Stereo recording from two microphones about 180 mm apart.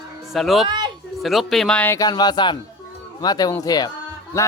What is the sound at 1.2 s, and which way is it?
Speech, centre (ahead or behind).